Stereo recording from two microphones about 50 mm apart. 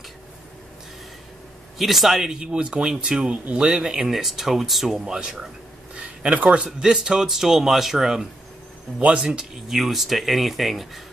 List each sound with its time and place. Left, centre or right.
1.8 s speech: centre
5.0 s speech: centre
5.9 s a sound: right
6.6 s speech: centre
9.0 s speech: right
9.8 s speech: centre